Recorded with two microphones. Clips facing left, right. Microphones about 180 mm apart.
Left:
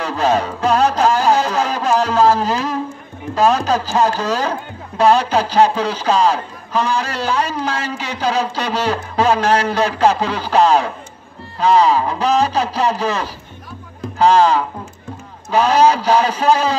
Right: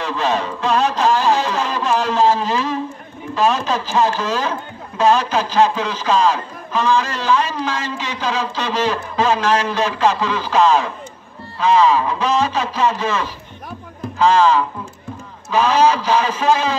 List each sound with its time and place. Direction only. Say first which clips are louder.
0.0 s a sound: left 3 dB; 40° left (ahead or behind)
3.3 s speech: left 3 dB; 40° left (ahead or behind)
15.7 s speech: left 3 dB; 40° left (ahead or behind)